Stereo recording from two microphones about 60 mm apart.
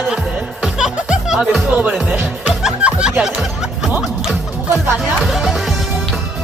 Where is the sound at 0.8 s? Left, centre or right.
Centre.